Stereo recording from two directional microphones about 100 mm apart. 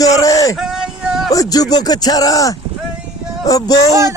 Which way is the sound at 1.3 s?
40° left (ahead or behind).